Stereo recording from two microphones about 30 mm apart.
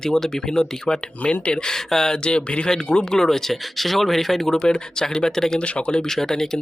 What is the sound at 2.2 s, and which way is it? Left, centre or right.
Speech, left.